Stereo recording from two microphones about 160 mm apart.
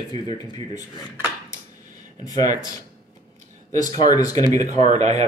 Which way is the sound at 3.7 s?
25° left (ahead or behind).